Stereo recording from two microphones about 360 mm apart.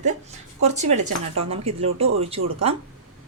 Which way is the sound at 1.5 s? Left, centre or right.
Centre.